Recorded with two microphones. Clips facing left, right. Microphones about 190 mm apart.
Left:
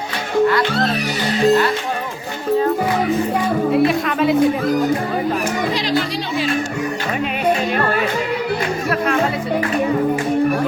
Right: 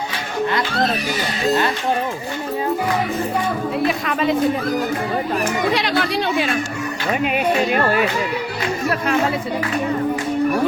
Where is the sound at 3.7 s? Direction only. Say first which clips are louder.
Left 5 dB; centre (ahead or behind).